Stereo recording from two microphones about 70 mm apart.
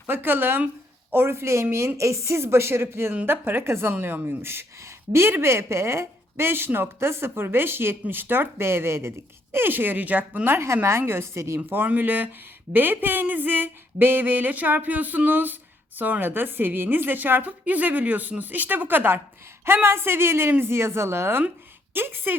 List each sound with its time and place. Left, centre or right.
0.1 s a woman's voice: right
11.7 s a woman's voice: right